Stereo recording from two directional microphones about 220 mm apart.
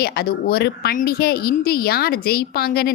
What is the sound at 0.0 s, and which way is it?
Speech, 45° left (ahead or behind).